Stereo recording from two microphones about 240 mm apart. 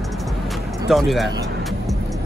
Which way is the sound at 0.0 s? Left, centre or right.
Centre.